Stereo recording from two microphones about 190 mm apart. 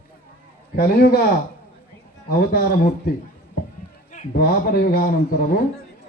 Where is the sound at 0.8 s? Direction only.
55° left (ahead or behind).